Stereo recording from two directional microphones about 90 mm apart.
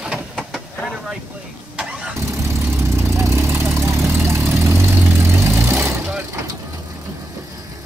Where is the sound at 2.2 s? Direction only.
30° right (ahead or behind).